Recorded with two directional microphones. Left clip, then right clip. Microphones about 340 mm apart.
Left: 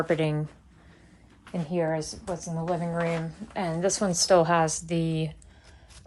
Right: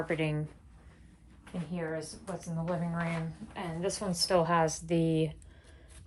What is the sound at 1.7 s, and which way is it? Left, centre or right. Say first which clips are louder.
A woman's voice: left 10 dB; centre.